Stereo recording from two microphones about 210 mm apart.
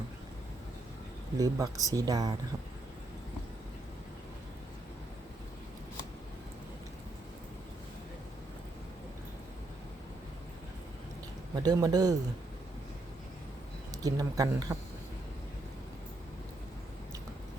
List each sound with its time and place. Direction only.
1.4 s speech: 15° right (ahead or behind)
11.5 s speech: 20° right (ahead or behind)
13.9 s speech: 15° right (ahead or behind)